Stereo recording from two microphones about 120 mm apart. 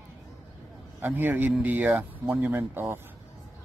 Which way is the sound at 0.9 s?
15° right (ahead or behind).